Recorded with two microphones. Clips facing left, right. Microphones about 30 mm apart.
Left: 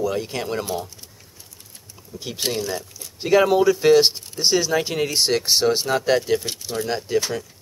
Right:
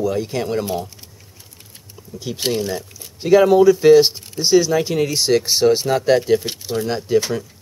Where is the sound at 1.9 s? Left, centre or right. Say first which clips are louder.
Right 4 dB; centre.